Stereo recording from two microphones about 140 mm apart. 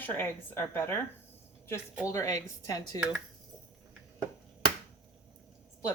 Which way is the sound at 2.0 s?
20° left (ahead or behind).